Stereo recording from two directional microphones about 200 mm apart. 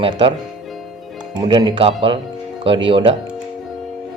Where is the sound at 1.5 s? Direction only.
25° right (ahead or behind).